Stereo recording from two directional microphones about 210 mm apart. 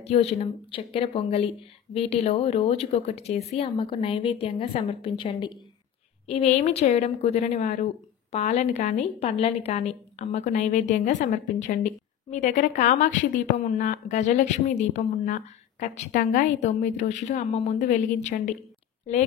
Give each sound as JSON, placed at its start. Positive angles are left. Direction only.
{"t": 0.0, "sound": "a woman's voice", "side_deg": 30}